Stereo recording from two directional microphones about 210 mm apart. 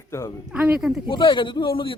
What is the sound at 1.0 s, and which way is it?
Speech, 20° left (ahead or behind).